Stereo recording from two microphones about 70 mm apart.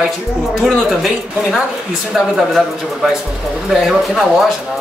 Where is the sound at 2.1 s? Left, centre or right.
Centre.